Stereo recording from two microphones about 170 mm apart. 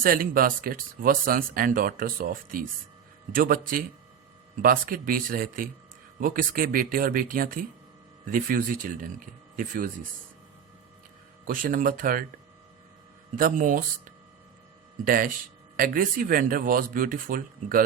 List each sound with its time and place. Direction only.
0.0 s speech: 60° right (ahead or behind)
11.4 s speech: 55° right (ahead or behind)
13.3 s speech: 50° right (ahead or behind)
15.0 s speech: 55° right (ahead or behind)